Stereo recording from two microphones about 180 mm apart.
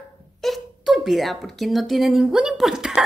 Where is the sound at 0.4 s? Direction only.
Centre (ahead or behind).